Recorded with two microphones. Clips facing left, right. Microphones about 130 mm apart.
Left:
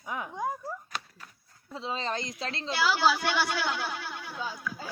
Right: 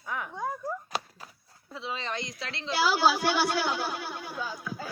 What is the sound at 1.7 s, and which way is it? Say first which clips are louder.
Speech: left 2 dB; 35° left (ahead or behind).